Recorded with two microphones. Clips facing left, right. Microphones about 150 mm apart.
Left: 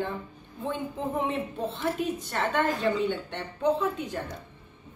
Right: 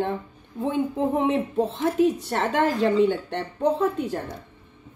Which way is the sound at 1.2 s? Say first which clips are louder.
Right 6 dB; 80° right.